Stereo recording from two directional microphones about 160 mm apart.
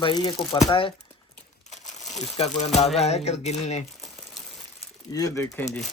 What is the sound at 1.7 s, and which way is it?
Crumpling, 45° left (ahead or behind).